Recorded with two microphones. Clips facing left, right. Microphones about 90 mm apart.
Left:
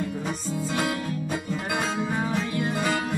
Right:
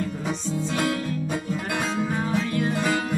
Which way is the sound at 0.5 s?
5° left (ahead or behind).